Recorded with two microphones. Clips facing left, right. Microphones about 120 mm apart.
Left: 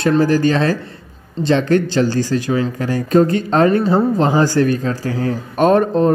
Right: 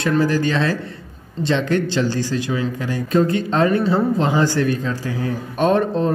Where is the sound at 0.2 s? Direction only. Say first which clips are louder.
Left 4 dB; 40° left (ahead or behind).